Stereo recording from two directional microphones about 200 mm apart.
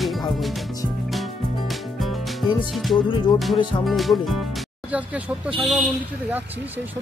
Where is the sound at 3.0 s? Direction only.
25° left (ahead or behind).